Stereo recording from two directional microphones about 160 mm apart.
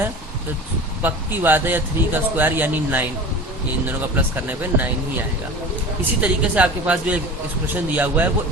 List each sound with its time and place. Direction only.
1.0 s speech: 10° right (ahead or behind)
6.2 s speech: 10° right (ahead or behind)